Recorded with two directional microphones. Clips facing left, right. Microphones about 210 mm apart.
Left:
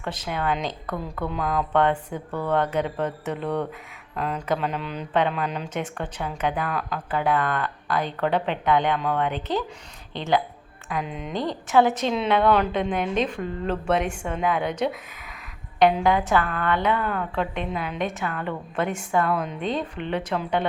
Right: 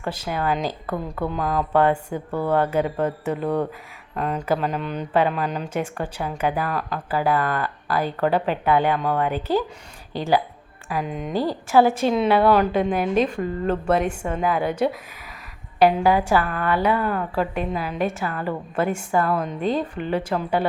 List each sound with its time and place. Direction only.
0.0 s speech: 5° right (ahead or behind)
11.0 s speech: 45° right (ahead or behind)
11.3 s speech: 5° right (ahead or behind)